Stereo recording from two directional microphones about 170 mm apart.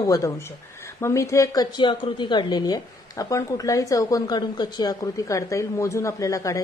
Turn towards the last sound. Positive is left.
turn(degrees=20)  # may be behind; listen again after turning